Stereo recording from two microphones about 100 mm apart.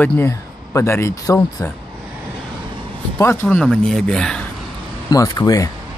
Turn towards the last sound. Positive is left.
turn(degrees=35)  # may be behind; listen again after turning